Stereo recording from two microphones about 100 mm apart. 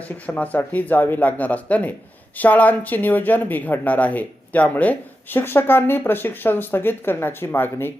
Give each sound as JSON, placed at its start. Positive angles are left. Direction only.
{"t": 0.3, "sound": "speech", "side_deg": 15}